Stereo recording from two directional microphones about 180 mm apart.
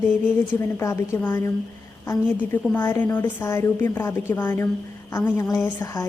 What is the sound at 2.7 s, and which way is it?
A woman's voice, 10° left (ahead or behind).